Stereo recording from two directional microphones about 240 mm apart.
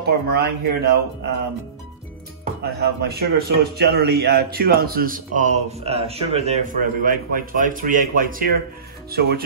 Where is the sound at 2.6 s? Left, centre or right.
Right.